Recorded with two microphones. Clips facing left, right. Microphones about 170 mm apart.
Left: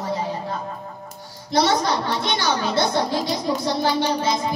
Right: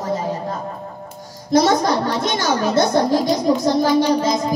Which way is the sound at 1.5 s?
45° right (ahead or behind).